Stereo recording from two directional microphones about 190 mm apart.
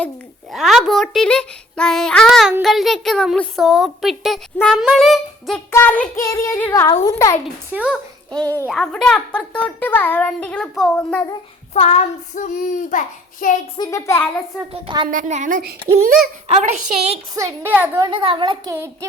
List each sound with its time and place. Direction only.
0.5 s a child's voice: centre (ahead or behind)
5.7 s child singing: 10° left (ahead or behind)
8.6 s a child's voice: centre (ahead or behind)
11.7 s child singing: 35° left (ahead or behind)
13.7 s child singing: 20° left (ahead or behind)
14.7 s a woman's voice: 30° right (ahead or behind)
15.1 s a woman's voice: 40° right (ahead or behind)
17.3 s a woman's voice: 15° right (ahead or behind)
18.1 s a woman's voice: 25° right (ahead or behind)